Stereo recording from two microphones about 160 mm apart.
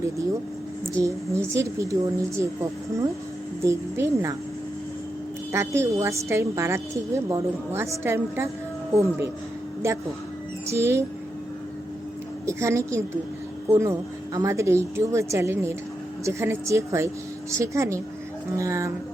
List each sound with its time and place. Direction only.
1.0 s a woman's voice: 20° right (ahead or behind)
5.5 s a woman's voice: 15° right (ahead or behind)
12.5 s a woman's voice: 20° right (ahead or behind)